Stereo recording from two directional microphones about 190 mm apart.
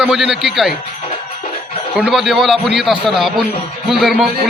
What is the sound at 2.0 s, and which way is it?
A man's voice, centre (ahead or behind).